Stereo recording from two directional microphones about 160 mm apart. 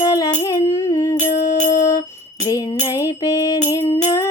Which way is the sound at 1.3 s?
50° left (ahead or behind).